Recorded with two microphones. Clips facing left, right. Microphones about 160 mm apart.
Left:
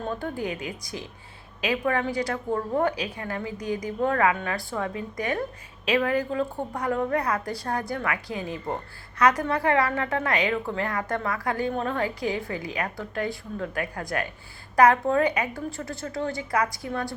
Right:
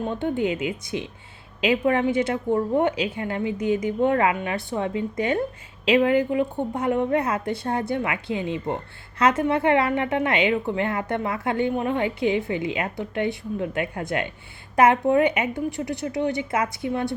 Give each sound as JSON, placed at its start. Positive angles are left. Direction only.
{"t": 0.1, "sound": "a woman's voice", "side_deg": -25}